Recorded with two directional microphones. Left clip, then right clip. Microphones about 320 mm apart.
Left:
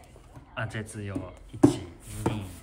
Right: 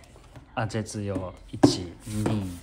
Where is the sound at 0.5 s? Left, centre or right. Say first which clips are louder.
Right 5 dB; centre.